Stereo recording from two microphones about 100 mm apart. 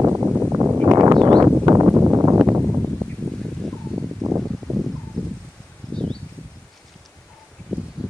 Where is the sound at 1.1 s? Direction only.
40° right (ahead or behind).